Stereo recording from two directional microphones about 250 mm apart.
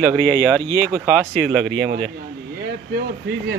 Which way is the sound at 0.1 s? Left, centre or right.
Centre.